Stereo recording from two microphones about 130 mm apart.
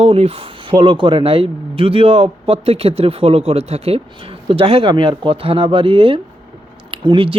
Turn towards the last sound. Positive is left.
turn(degrees=-45)  # may be behind; listen again after turning